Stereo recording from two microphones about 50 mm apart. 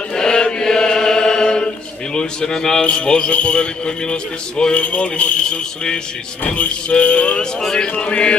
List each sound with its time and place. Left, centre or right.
0.1 s chant: centre
2.1 s a man's voice: centre
7.6 s a man's voice: centre